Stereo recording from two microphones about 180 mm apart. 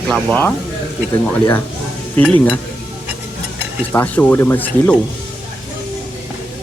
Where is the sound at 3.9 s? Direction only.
10° left (ahead or behind).